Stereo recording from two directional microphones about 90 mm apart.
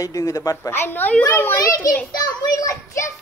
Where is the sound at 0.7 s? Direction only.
20° left (ahead or behind).